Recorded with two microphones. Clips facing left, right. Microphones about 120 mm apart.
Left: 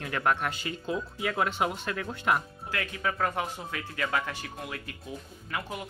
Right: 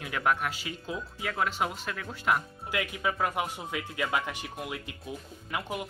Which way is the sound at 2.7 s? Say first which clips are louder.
Right 1 dB; 15° right (ahead or behind).